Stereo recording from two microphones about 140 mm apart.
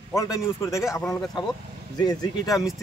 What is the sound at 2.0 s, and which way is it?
Speech, 30° left (ahead or behind).